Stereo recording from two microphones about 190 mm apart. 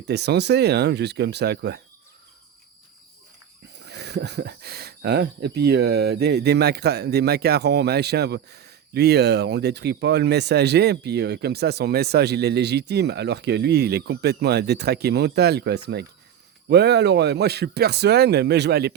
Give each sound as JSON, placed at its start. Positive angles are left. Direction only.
{"t": 0.1, "sound": "speech", "side_deg": -60}
{"t": 3.8, "sound": "speech", "side_deg": -65}